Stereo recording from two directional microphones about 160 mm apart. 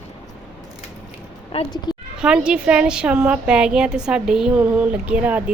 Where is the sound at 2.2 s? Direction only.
5° right (ahead or behind).